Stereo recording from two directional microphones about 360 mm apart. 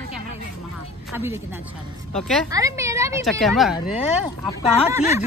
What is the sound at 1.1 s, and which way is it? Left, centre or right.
Speech, centre.